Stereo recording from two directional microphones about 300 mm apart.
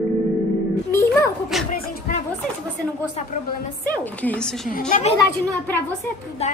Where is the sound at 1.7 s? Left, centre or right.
Left.